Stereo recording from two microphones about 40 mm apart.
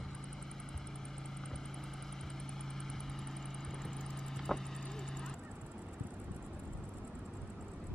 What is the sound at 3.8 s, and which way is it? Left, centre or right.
Vehicle, centre.